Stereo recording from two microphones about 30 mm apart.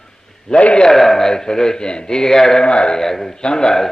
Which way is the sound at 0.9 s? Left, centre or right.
Centre.